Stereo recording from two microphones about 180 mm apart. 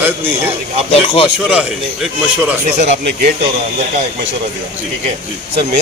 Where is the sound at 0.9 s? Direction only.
35° left (ahead or behind).